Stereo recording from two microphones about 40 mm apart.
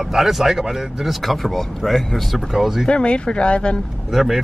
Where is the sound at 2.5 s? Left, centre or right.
Centre.